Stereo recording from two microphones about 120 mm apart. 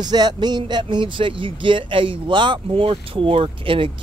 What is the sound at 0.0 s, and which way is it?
Speech, 35° right (ahead or behind).